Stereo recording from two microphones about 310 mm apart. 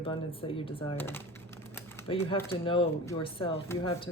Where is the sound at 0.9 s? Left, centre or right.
Centre.